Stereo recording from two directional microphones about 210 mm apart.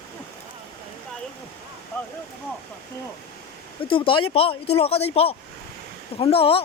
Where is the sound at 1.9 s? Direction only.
10° left (ahead or behind).